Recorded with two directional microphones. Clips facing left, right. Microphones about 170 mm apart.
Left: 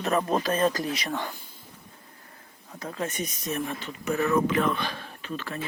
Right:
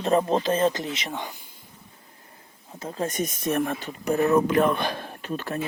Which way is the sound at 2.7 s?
30° right (ahead or behind).